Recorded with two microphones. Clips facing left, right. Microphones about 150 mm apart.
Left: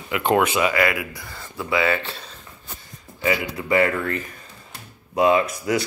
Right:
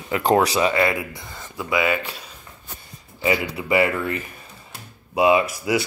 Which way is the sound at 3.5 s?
10° right (ahead or behind).